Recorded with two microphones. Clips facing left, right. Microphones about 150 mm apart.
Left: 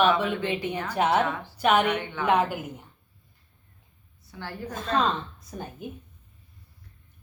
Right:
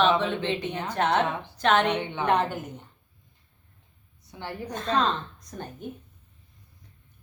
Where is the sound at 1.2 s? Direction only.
20° right (ahead or behind).